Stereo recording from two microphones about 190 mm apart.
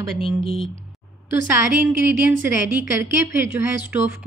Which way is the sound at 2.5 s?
10° right (ahead or behind).